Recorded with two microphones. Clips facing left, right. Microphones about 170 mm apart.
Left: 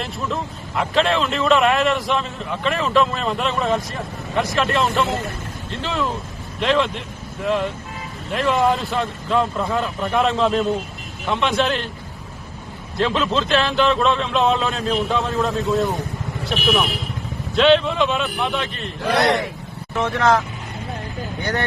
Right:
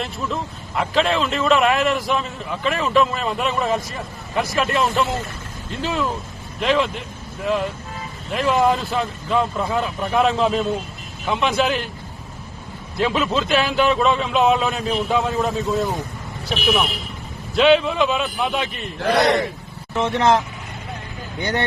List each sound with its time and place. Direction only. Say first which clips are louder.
0.0 s a man's voice: even; centre (ahead or behind)
13.0 s a man's voice: even; 5° right (ahead or behind)
20.0 s speech: right 1 dB; 20° right (ahead or behind)